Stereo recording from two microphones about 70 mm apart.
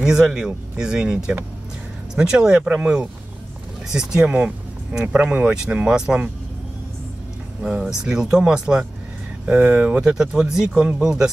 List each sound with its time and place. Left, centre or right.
0.0 s speech: centre
7.8 s speech: centre
10.0 s speech: centre